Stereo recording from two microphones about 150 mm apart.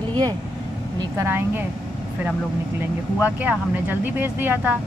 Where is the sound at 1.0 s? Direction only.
20° right (ahead or behind).